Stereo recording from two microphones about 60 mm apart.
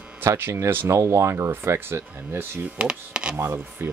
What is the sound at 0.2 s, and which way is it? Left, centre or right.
Speech, right.